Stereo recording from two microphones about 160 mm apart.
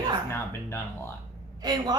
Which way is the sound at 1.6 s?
25° right (ahead or behind).